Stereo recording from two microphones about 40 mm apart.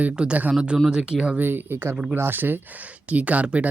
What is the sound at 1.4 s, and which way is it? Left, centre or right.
Speech, right.